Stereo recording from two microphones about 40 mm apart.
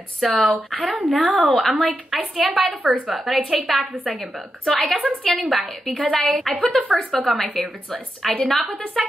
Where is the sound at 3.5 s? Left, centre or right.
Centre.